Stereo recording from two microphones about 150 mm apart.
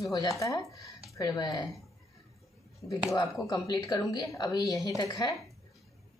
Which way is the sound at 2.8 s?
25° left (ahead or behind).